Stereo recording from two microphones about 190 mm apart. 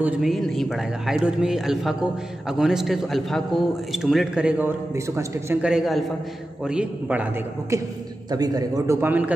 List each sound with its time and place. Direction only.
0.0 s speech: centre (ahead or behind)
7.7 s a man's voice: 15° right (ahead or behind)